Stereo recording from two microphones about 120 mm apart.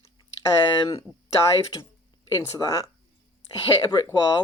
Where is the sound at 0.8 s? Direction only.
55° left (ahead or behind).